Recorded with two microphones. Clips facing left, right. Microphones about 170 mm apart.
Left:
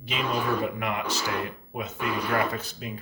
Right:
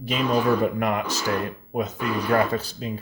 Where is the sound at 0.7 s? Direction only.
45° right (ahead or behind).